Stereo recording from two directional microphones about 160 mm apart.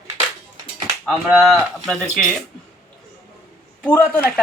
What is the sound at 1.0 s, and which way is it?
Speech, centre (ahead or behind).